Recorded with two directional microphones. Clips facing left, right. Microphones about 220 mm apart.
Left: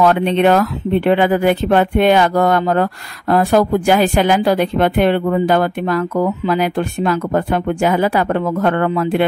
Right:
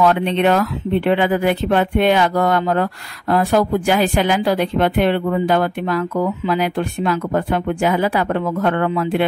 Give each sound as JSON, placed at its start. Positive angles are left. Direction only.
{"t": 0.0, "sound": "speech", "side_deg": 45}